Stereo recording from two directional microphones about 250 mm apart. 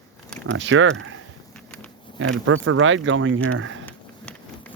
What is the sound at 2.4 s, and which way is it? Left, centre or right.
Speech, right.